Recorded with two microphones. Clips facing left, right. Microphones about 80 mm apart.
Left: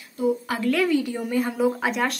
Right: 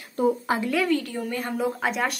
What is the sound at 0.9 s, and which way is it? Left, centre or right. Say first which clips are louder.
A woman's voice: left 2 dB; centre.